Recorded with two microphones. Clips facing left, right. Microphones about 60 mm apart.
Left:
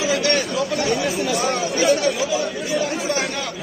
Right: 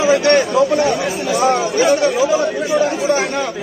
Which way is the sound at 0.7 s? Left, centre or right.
Centre.